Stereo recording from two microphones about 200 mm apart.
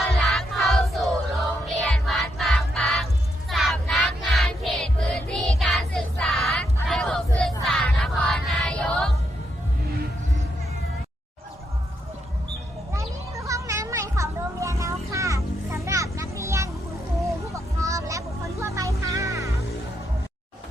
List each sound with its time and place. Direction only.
0.0 s music: centre (ahead or behind)
3.5 s child singing: centre (ahead or behind)
7.6 s music: centre (ahead or behind)
13.0 s a sound: 15° right (ahead or behind)
17.2 s vehicle: 15° right (ahead or behind)